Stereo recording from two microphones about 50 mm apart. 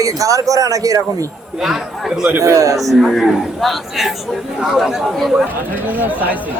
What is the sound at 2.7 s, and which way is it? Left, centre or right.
Speech, centre.